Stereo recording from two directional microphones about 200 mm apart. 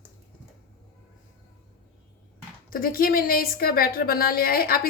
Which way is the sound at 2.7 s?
45° left (ahead or behind).